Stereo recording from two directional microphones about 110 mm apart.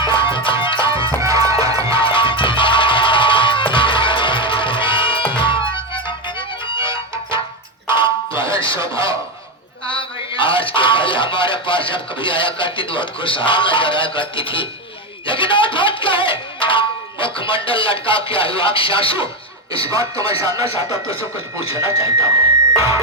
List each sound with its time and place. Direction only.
0.2 s music: 50° left (ahead or behind)
1.2 s music: 30° right (ahead or behind)
2.0 s music: 50° left (ahead or behind)
7.9 s a sound: 50° left (ahead or behind)
9.9 s music: 50° left (ahead or behind)
19.9 s speech: 30° right (ahead or behind)
21.1 s speech: 55° left (ahead or behind)
21.8 s speech: 30° right (ahead or behind)